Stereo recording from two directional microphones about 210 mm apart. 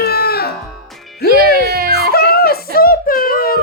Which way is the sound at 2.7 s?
45° left (ahead or behind).